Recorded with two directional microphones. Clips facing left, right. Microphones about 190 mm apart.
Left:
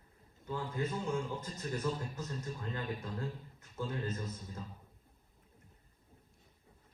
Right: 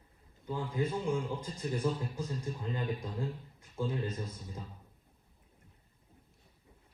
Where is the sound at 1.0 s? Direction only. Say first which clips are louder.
Right 3 dB; 10° right (ahead or behind).